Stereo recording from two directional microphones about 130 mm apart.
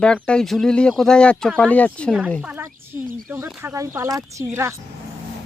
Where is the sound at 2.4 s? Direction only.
15° right (ahead or behind).